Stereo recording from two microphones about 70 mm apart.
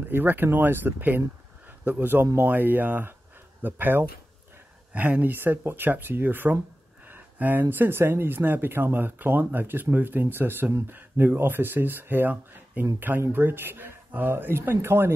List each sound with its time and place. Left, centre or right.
0.1 s speech: right
7.1 s a sound: right
7.7 s speech: right